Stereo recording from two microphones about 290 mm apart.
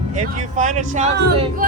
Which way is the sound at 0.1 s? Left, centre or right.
Right.